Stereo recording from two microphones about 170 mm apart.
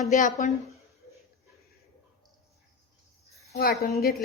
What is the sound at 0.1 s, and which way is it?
Speech, 45° left (ahead or behind).